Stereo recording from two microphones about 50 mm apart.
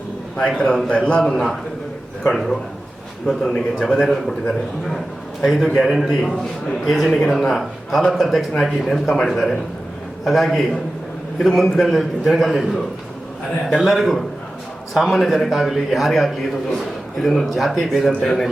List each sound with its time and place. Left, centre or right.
0.4 s a man's voice: centre
2.2 s a man's voice: centre
6.2 s a man's voice: centre
13.7 s a man's voice: centre